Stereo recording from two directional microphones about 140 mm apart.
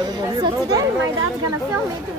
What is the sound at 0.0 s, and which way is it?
Chatter, 25° right (ahead or behind).